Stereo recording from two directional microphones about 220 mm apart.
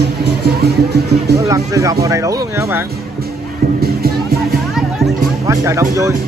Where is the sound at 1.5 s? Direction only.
15° right (ahead or behind).